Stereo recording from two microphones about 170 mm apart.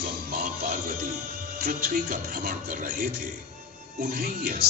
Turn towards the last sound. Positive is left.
turn(degrees=-60)  # may be behind; listen again after turning